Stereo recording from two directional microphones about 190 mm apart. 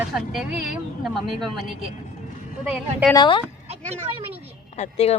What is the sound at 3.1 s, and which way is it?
Speech, 25° left (ahead or behind).